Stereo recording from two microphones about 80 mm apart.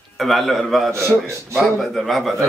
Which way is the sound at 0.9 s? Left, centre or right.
Right.